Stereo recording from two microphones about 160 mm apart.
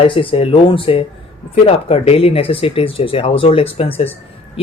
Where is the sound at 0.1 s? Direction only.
35° left (ahead or behind).